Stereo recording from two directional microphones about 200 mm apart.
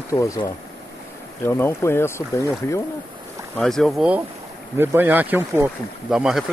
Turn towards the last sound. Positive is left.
turn(degrees=0)  # may be behind; listen again after turning